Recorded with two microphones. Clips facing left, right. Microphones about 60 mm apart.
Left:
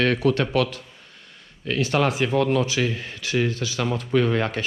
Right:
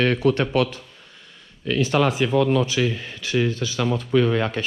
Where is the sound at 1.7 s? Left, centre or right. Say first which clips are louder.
Right 2 dB; left.